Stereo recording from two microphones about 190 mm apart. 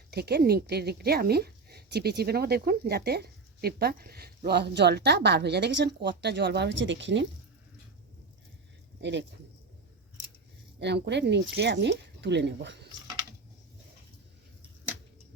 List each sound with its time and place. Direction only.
0.1 s a woman's voice: 55° right (ahead or behind)
9.0 s speech: 65° right (ahead or behind)
10.8 s a woman's voice: 65° right (ahead or behind)